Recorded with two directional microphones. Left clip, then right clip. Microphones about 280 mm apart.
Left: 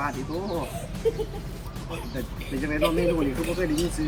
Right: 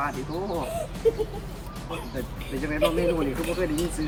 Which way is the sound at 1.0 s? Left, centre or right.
Right.